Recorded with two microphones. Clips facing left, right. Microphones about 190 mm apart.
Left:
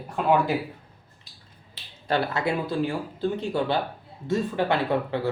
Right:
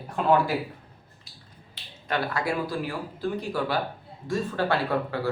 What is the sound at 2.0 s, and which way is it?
Speech, 25° left (ahead or behind).